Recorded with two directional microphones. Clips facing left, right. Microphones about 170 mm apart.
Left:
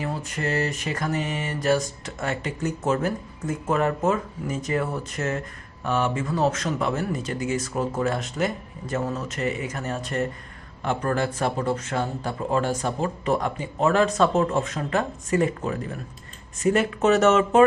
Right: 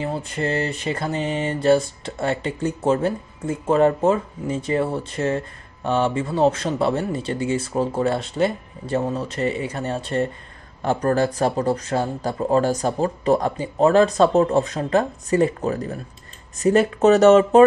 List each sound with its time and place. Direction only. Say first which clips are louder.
0.0 s mantra: right 4 dB; 30° right (ahead or behind)
5.9 s speech: right 4 dB; 30° right (ahead or behind)